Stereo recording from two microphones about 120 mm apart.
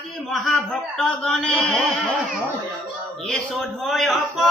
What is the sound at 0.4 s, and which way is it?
Speech, centre (ahead or behind).